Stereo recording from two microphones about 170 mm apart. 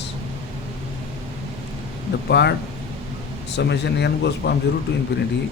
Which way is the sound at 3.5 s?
85° left.